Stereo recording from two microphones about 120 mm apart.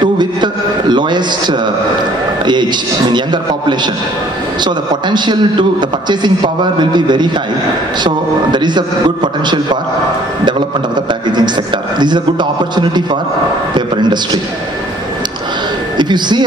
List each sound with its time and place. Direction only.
0.0 s a sound: 40° right (ahead or behind)
3.1 s a man's voice: 40° right (ahead or behind)
11.3 s a man's voice: 40° right (ahead or behind)
16.0 s a man's voice: 40° right (ahead or behind)